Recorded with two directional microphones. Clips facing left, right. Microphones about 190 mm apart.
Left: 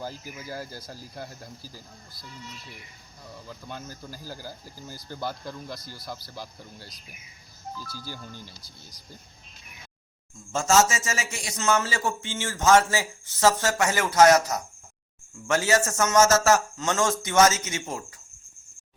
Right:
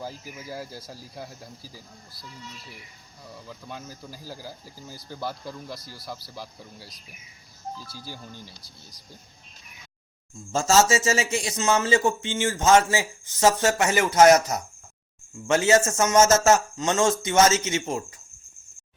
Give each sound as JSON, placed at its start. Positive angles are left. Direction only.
{"t": 0.0, "sound": "speech", "side_deg": 0}
{"t": 3.3, "sound": "speech", "side_deg": 0}
{"t": 7.9, "sound": "speech", "side_deg": 0}
{"t": 10.5, "sound": "a man's voice", "side_deg": -35}